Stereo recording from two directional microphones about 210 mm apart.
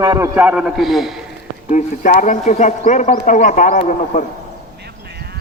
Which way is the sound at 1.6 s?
35° left (ahead or behind).